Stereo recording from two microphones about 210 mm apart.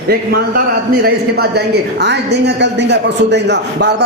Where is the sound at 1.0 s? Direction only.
50° right (ahead or behind).